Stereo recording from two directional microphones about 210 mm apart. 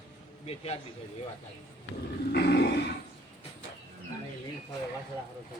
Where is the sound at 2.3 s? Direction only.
55° left (ahead or behind).